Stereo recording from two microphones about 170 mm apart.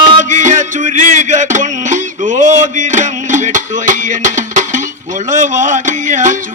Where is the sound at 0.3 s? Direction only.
45° right (ahead or behind).